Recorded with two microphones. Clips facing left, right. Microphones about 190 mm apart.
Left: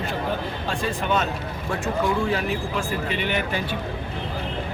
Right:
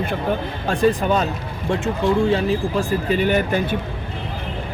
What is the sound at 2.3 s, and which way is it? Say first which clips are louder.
Speech: right 6 dB; 40° right (ahead or behind).